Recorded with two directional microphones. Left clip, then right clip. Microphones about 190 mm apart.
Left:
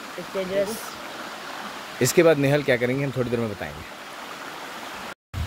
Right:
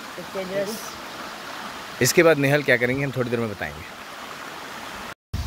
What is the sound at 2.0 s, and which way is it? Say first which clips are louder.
Speech: right 1 dB; centre (ahead or behind).